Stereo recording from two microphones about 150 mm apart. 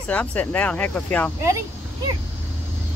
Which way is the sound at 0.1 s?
10° left (ahead or behind).